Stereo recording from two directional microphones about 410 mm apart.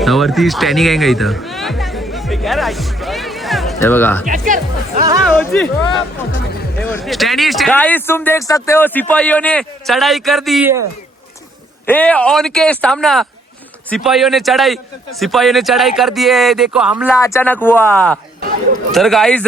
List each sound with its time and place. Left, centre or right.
0.0 s music: centre
4.3 s speech: centre
5.4 s speech: centre
6.9 s speech: centre
11.9 s speech: centre